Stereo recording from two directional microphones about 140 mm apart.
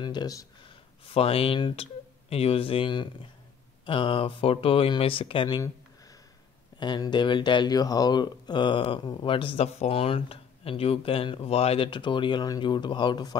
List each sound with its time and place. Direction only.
0.0 s speech: 30° left (ahead or behind)
1.0 s speech: 45° left (ahead or behind)
6.8 s speech: 30° left (ahead or behind)